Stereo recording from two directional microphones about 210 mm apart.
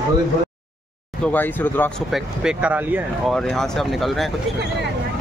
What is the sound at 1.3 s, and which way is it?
Speech, 10° left (ahead or behind).